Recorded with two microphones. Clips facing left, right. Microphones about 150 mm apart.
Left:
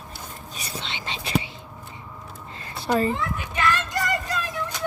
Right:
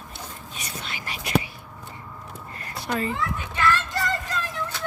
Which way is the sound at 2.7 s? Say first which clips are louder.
Left 5 dB; 30° left (ahead or behind).